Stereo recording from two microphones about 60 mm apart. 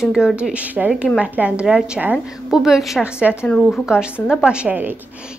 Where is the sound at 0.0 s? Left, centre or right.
Centre.